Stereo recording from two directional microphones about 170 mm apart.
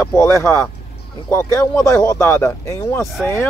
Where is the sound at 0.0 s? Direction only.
15° left (ahead or behind).